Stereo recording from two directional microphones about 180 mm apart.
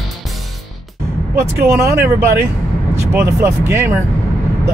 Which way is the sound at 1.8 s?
15° right (ahead or behind).